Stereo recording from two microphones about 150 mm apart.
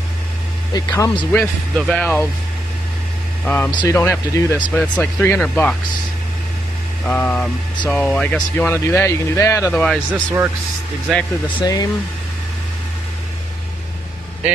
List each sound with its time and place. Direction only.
0.7 s speech: 20° left (ahead or behind)
1.4 s speech: 5° left (ahead or behind)
3.4 s speech: 10° left (ahead or behind)
7.1 s speech: 10° left (ahead or behind)
11.6 s speech: 25° left (ahead or behind)